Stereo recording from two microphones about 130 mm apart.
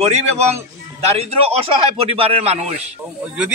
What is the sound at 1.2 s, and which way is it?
A man's voice, 50° right (ahead or behind).